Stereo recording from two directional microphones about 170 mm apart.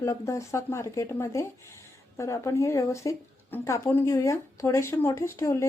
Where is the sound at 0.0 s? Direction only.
15° left (ahead or behind).